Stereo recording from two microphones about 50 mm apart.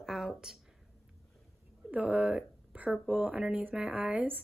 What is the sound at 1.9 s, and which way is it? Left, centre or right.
Speech, right.